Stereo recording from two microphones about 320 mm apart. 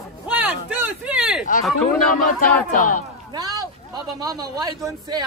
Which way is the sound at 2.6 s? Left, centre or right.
Left.